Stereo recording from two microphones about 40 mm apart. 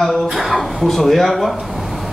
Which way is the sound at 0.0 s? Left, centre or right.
Centre.